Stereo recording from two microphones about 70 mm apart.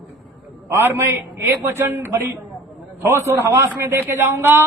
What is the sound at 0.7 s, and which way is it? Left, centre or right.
A man's voice, right.